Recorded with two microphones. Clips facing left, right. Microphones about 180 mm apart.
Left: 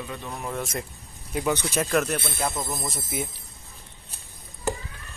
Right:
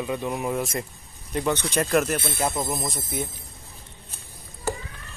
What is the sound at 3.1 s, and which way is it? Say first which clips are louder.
Speech: even; 10° left (ahead or behind).